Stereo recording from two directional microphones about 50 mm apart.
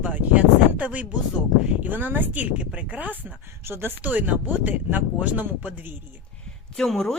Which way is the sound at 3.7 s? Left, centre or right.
Right.